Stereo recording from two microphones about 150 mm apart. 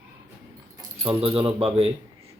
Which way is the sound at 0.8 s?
40° right (ahead or behind).